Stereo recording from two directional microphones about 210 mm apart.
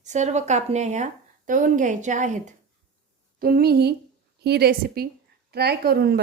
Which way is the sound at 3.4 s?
45° right (ahead or behind).